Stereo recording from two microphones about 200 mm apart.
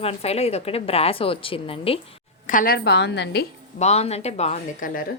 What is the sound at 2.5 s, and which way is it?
Speech, 45° left (ahead or behind).